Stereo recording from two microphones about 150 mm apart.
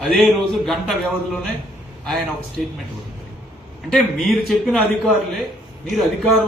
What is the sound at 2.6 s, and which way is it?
Speech, centre (ahead or behind).